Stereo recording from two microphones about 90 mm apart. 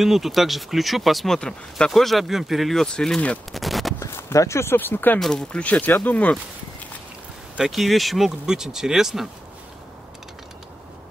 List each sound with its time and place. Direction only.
0.0 s speech: 5° right (ahead or behind)
3.5 s gunshot: centre (ahead or behind)
4.0 s speech: 35° left (ahead or behind)
5.2 s speech: 10° left (ahead or behind)
7.5 s speech: 5° right (ahead or behind)